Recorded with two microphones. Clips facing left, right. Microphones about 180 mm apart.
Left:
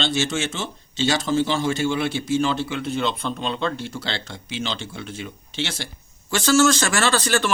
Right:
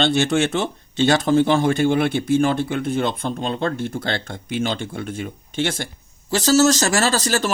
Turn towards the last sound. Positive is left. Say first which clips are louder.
# right 1 dB
turn(degrees=-40)  # may be behind; listen again after turning